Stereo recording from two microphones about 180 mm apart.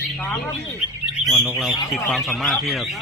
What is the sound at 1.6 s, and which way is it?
Speech, centre (ahead or behind).